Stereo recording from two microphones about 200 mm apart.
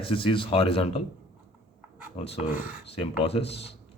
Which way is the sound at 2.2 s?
30° left (ahead or behind).